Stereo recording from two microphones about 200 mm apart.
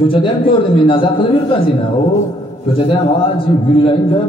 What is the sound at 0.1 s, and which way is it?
A man's voice, 25° left (ahead or behind).